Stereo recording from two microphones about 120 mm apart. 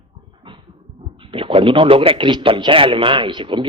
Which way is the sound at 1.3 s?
50° right (ahead or behind).